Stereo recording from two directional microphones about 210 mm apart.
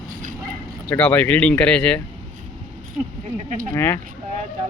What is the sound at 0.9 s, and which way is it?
Speech, 5° left (ahead or behind).